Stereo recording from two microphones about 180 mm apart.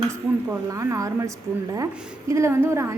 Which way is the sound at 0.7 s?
15° right (ahead or behind).